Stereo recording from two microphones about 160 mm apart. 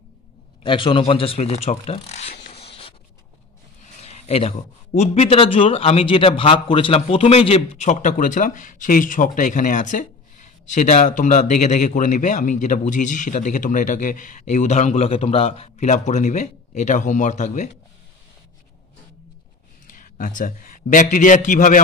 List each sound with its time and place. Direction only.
0.7 s speech: 30° left (ahead or behind)
2.4 s a sound: 35° left (ahead or behind)
4.0 s a man's voice: 40° left (ahead or behind)
19.9 s a man's voice: 55° left (ahead or behind)